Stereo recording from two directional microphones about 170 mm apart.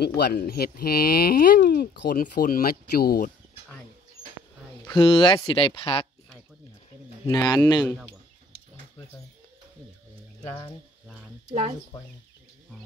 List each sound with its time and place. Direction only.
0.2 s speech: 65° left (ahead or behind)
4.8 s speech: 30° left (ahead or behind)
7.2 s a man's voice: 20° left (ahead or behind)